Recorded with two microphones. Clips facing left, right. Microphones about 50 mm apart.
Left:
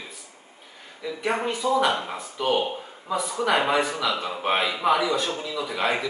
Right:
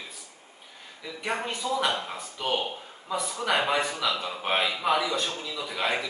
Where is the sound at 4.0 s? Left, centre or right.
Centre.